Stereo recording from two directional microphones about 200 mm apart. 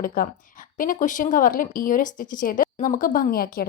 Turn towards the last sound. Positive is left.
turn(degrees=50)  # may be behind; listen again after turning